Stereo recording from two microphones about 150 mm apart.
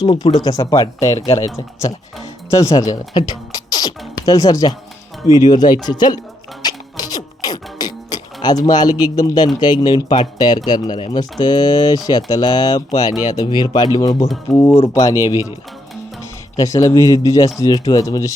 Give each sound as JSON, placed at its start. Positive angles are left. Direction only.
{"t": 0.0, "sound": "speech", "side_deg": 35}
{"t": 6.6, "sound": "music", "side_deg": 25}
{"t": 9.0, "sound": "speech", "side_deg": 25}
{"t": 14.5, "sound": "speech", "side_deg": 15}
{"t": 16.6, "sound": "speech", "side_deg": 25}